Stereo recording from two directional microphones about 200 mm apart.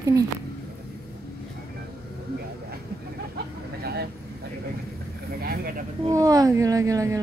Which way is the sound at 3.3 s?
50° right (ahead or behind).